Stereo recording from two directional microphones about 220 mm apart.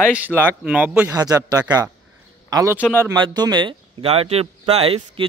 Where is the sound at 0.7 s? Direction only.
5° right (ahead or behind).